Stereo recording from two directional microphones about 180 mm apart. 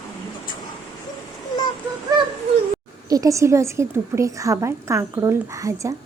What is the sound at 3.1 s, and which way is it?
A woman's voice, 20° right (ahead or behind).